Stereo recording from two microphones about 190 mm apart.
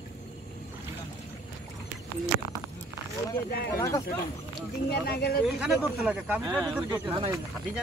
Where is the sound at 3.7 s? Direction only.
15° left (ahead or behind).